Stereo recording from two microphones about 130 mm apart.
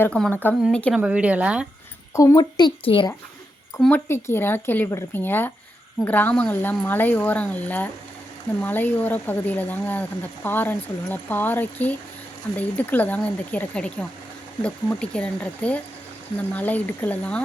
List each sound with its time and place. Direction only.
0.0 s speech: 10° left (ahead or behind)
0.9 s speech: 10° right (ahead or behind)
2.1 s speech: 30° left (ahead or behind)
3.8 s speech: 10° left (ahead or behind)